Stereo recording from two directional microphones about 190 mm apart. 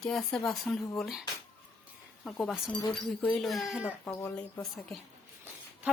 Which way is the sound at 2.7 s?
20° left (ahead or behind).